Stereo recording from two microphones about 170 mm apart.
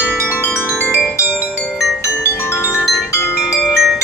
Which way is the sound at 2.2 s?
15° left (ahead or behind).